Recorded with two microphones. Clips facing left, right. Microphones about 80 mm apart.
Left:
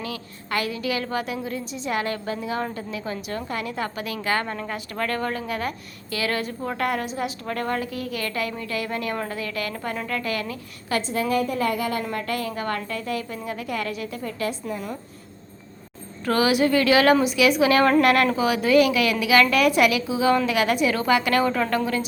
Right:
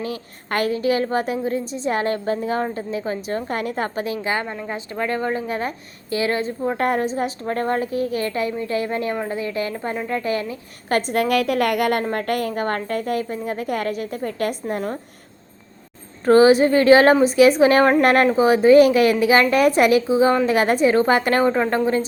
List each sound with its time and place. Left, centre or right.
0.0 s a woman's voice: right
3.5 s a woman's voice: right
10.8 s a woman's voice: right
11.2 s a woman's voice: right
12.0 s a woman's voice: right
16.2 s a woman's voice: right